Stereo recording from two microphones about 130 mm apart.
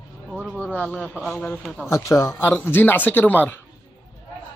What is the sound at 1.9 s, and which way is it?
A man's voice, 25° left (ahead or behind).